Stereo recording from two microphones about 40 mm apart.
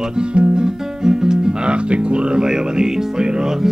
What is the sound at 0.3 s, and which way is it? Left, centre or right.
Guitar, right.